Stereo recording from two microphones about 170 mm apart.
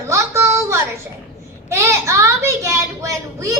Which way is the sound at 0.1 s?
15° right (ahead or behind).